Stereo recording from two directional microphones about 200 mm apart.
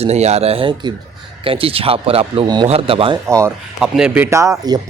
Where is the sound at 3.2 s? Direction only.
15° right (ahead or behind).